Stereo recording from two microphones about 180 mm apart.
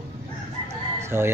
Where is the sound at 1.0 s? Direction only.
15° right (ahead or behind).